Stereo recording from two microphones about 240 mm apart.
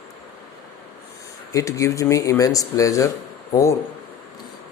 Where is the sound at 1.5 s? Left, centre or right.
Centre.